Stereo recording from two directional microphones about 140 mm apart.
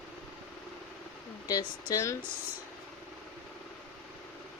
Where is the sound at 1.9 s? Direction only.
25° left (ahead or behind).